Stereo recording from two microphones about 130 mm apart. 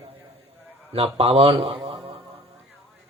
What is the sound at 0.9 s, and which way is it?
A man's voice, 50° right (ahead or behind).